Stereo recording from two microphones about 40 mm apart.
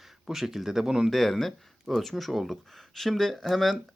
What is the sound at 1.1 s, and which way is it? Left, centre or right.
Speech, centre.